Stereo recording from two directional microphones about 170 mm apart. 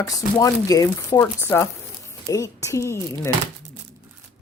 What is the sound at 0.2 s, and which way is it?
A woman's voice, 20° left (ahead or behind).